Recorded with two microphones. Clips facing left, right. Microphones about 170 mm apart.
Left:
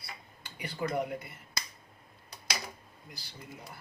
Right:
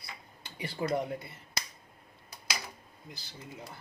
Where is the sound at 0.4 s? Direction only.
25° right (ahead or behind).